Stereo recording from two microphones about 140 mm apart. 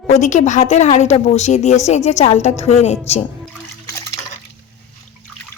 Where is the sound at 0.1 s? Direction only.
60° left (ahead or behind).